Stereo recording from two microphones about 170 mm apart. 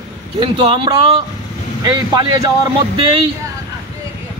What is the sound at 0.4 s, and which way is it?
Speech, 25° right (ahead or behind).